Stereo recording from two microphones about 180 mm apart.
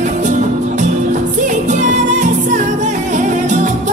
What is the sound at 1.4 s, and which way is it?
Music, 40° right (ahead or behind).